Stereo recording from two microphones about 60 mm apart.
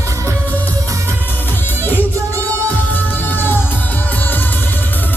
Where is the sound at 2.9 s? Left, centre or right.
Left.